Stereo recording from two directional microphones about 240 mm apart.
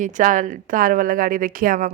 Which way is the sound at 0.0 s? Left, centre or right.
Right.